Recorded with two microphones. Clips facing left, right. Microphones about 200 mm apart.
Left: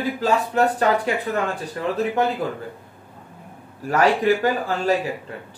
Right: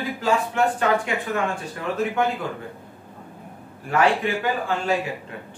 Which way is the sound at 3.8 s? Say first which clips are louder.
Left 3 dB; 40° left (ahead or behind).